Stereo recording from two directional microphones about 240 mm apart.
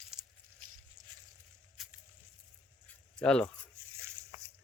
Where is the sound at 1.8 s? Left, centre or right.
Centre.